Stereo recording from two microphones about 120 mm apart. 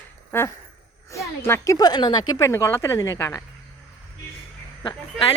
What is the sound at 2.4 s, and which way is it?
Speech, 20° left (ahead or behind).